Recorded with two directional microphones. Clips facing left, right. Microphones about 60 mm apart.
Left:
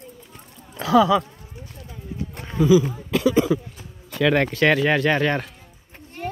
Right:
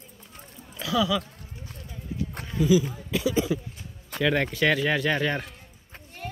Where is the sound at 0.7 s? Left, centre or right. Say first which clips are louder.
Left 9 dB; left.